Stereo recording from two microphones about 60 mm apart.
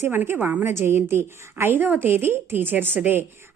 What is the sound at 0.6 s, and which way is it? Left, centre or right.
A woman's voice, right.